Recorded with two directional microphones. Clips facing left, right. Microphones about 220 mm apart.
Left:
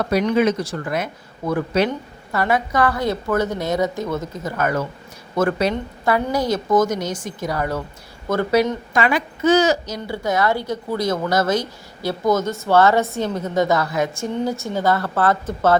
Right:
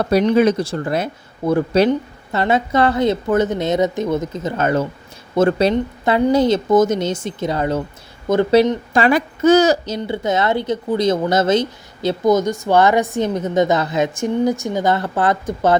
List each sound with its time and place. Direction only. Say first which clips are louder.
0.0 s a woman's voice: right 4 dB; 30° right (ahead or behind)
9.0 s speech: right 4 dB; 40° right (ahead or behind)
9.8 s a woman's voice: right 4 dB; 25° right (ahead or behind)